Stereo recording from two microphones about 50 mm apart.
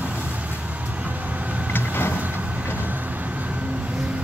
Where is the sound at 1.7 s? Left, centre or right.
Left.